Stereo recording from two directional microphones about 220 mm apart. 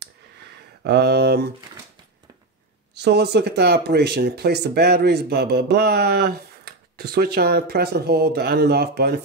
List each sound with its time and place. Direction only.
0.8 s speech: 50° right (ahead or behind)
2.9 s speech: 50° right (ahead or behind)